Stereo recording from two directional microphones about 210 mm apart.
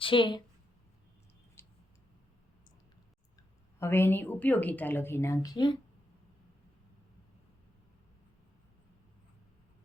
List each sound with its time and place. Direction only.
0.0 s a woman's voice: 25° left (ahead or behind)
1.6 s a sound: 10° left (ahead or behind)
3.8 s a woman's voice: 10° left (ahead or behind)